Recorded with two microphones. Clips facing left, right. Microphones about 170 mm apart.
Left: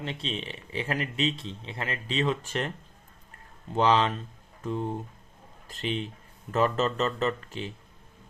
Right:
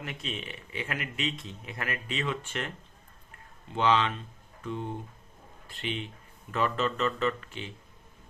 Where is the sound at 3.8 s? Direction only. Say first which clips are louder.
Left 3 dB; 40° left (ahead or behind).